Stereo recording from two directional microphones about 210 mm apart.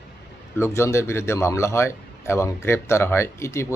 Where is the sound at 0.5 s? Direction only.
15° left (ahead or behind).